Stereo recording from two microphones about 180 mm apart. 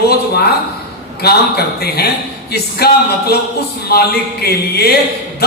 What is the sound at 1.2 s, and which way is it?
Music, 60° left (ahead or behind).